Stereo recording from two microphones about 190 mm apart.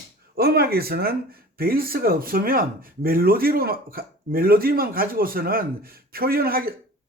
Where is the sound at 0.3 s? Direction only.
55° right (ahead or behind).